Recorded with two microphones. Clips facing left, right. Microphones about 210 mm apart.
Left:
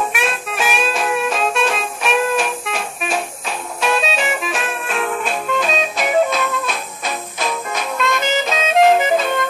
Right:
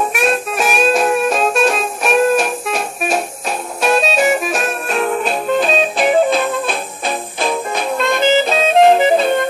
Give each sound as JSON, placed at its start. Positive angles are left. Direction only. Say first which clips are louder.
{"t": 0.1, "sound": "music", "louder": "right 6 dB", "side_deg": -40}